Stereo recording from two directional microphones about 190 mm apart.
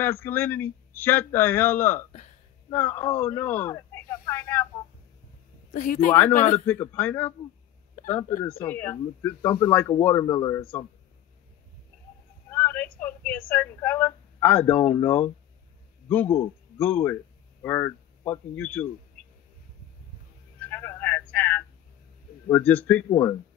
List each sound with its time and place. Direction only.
0.0 s a man's voice: 10° left (ahead or behind)
5.7 s speech: 40° left (ahead or behind)
6.6 s a man's voice: 10° left (ahead or behind)
7.9 s a sound: 45° left (ahead or behind)
8.6 s a man's voice: 10° left (ahead or behind)
12.4 s a sound: 10° left (ahead or behind)
13.5 s a man's voice: 10° left (ahead or behind)
20.6 s a sound: 10° left (ahead or behind)
22.5 s a man's voice: 10° left (ahead or behind)